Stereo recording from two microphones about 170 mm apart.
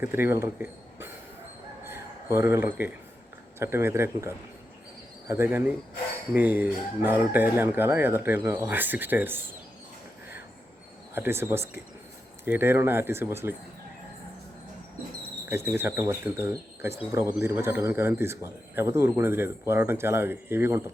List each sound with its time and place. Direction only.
0.0 s speech: 15° right (ahead or behind)
1.9 s a sound: 15° right (ahead or behind)
3.6 s a man's voice: 15° right (ahead or behind)
11.1 s a man's voice: 15° right (ahead or behind)
15.4 s a man's voice: 15° right (ahead or behind)